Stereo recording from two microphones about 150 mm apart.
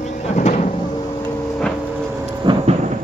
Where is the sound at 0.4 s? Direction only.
50° left (ahead or behind).